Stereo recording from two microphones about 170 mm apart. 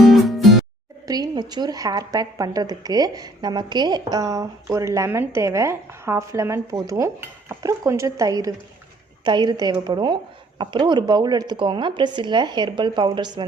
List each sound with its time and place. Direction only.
0.0 s music: centre (ahead or behind)
1.0 s speech: 20° right (ahead or behind)